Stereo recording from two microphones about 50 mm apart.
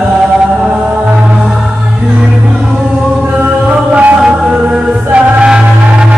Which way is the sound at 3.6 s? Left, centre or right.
Right.